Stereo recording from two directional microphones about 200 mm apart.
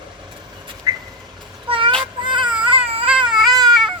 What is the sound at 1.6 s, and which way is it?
Child singing, 25° right (ahead or behind).